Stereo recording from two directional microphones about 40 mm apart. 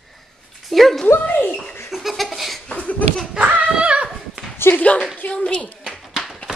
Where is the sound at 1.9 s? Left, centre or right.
Centre.